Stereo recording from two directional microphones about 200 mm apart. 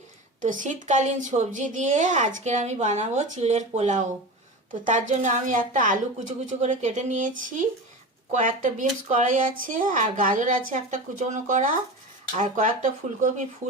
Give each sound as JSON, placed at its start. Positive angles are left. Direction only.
{"t": 0.4, "sound": "a woman's voice", "side_deg": -40}